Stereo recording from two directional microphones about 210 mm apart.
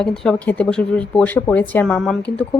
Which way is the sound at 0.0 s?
5° left (ahead or behind).